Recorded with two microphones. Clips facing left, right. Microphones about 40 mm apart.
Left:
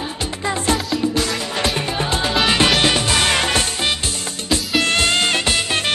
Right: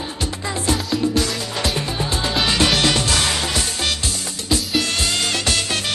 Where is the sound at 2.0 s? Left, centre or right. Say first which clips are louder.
Left 4 dB; left.